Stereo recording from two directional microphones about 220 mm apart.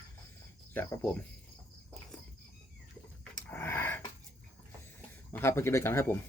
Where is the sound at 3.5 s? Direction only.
10° left (ahead or behind).